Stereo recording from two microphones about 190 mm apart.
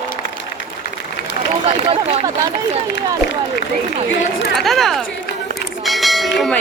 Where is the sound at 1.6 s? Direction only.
35° right (ahead or behind).